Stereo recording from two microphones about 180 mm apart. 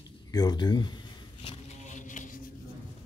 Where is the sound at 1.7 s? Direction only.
45° left (ahead or behind).